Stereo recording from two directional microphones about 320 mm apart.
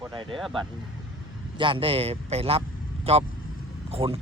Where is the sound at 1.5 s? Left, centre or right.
Centre.